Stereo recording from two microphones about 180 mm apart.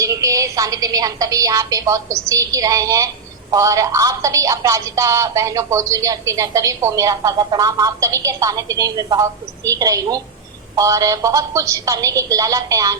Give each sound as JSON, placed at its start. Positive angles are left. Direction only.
{"t": 0.0, "sound": "a woman's voice", "side_deg": -20}